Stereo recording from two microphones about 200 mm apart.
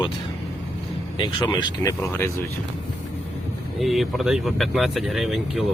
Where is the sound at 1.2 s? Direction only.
20° left (ahead or behind).